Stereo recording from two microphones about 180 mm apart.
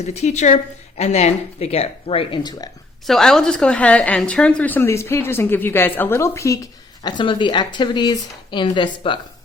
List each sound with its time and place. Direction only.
0.0 s a woman's voice: 40° left (ahead or behind); by 2.6 s 20° left (ahead or behind)
3.1 s a woman's voice: centre (ahead or behind); by 9.2 s 25° left (ahead or behind)